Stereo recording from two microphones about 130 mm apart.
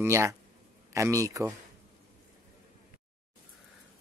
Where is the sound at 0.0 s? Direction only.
20° right (ahead or behind).